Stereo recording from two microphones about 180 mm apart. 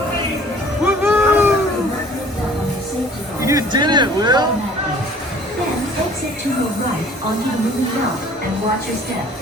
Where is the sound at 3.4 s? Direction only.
20° right (ahead or behind).